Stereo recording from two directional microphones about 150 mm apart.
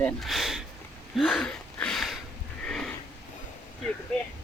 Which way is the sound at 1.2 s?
5° left (ahead or behind).